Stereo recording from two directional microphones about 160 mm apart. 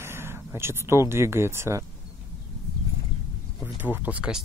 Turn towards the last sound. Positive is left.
turn(degrees=-10)  # may be behind; listen again after turning